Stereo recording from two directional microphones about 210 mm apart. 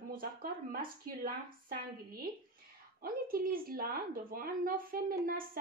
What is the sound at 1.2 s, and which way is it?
A woman's voice, 45° right (ahead or behind).